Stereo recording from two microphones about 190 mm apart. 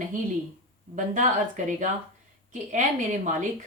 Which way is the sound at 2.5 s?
40° right (ahead or behind).